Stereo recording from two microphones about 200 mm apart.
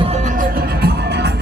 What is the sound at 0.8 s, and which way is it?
Music, 55° right (ahead or behind).